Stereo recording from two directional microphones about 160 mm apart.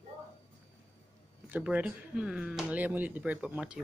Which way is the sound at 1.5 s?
5° right (ahead or behind).